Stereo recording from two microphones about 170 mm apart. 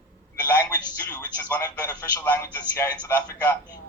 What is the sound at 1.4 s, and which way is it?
Speech, 20° left (ahead or behind).